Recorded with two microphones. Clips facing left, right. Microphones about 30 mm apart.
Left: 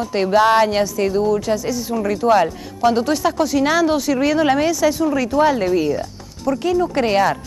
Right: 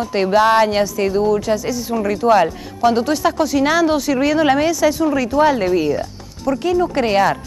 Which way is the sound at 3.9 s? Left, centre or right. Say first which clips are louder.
Right 1 dB; centre.